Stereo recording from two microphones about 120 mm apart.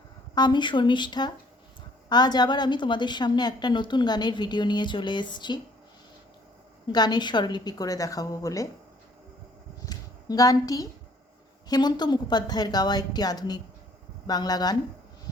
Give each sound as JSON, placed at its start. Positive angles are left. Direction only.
{"t": 0.3, "sound": "a woman's voice", "side_deg": 40}
{"t": 6.8, "sound": "a woman's voice", "side_deg": 35}
{"t": 9.8, "sound": "a sound", "side_deg": 35}
{"t": 11.7, "sound": "a woman's voice", "side_deg": 35}